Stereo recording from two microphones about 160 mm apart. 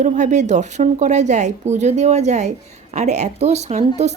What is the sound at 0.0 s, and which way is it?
A woman's voice, 50° right (ahead or behind).